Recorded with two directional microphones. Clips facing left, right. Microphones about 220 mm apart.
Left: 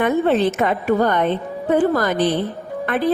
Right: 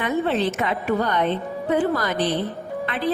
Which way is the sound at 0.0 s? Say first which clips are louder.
Left 5 dB; 50° left (ahead or behind).